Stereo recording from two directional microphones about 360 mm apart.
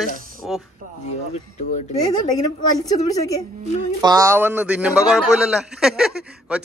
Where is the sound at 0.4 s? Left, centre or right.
Centre.